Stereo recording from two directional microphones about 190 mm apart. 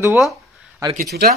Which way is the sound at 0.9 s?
50° right (ahead or behind).